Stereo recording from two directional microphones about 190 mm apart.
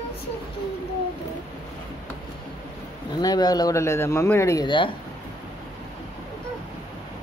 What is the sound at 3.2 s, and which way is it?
A man's voice, 20° left (ahead or behind).